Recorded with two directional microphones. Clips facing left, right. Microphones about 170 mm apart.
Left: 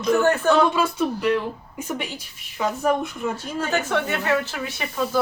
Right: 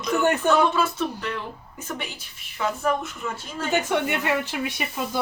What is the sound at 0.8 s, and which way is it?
Speech, 10° left (ahead or behind).